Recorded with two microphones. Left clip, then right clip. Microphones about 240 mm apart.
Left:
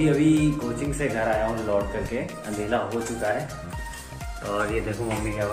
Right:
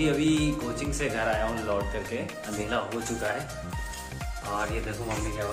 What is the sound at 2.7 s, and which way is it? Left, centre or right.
Speech, centre.